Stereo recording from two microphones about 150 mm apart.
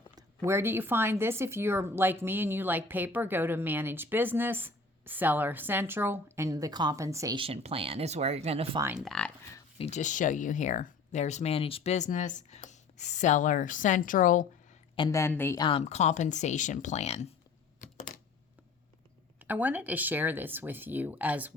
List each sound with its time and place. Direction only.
0.2 s a woman's voice: 20° right (ahead or behind)
7.3 s speech: 40° right (ahead or behind)
9.0 s speech: 5° left (ahead or behind)
9.7 s speech: 45° left (ahead or behind); by 14.4 s 60° left (ahead or behind)
15.1 s a woman's voice: 15° left (ahead or behind)
15.5 s speech: 30° left (ahead or behind)
15.8 s speech: 50° left (ahead or behind)
17.7 s a sound: 60° left (ahead or behind)
19.4 s a woman's voice: 10° right (ahead or behind)